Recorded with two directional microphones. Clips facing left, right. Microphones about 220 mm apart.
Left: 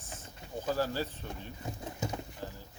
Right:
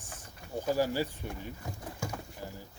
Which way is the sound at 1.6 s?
20° left (ahead or behind).